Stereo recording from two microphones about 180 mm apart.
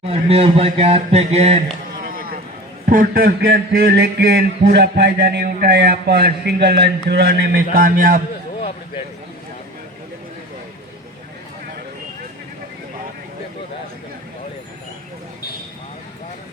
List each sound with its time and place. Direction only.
0.0 s speech: 35° right (ahead or behind)
2.0 s a sound: 55° right (ahead or behind)
2.8 s a man's voice: 50° right (ahead or behind)